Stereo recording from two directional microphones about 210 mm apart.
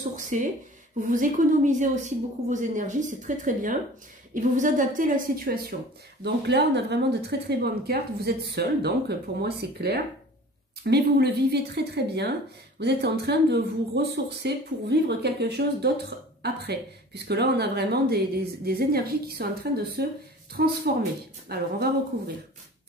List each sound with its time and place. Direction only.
0.1 s a woman's voice: 35° right (ahead or behind)